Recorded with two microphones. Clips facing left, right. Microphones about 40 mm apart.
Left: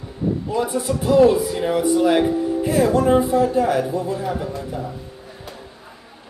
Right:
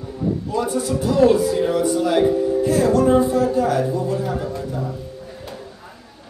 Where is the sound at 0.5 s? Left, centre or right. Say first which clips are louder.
Even; centre.